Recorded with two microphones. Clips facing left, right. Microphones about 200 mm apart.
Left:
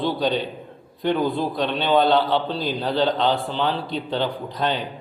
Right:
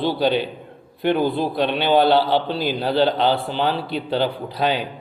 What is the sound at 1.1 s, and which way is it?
Speech, 30° right (ahead or behind).